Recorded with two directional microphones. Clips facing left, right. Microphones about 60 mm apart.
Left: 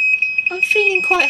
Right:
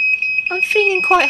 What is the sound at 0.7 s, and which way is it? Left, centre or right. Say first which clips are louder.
Speech: right 3 dB; right.